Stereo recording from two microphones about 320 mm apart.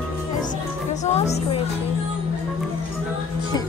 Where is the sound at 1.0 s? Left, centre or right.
Left.